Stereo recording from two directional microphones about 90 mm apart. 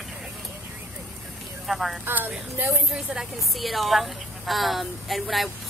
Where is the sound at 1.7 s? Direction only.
Centre (ahead or behind).